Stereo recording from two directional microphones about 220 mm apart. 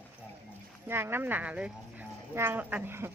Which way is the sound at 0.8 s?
10° right (ahead or behind).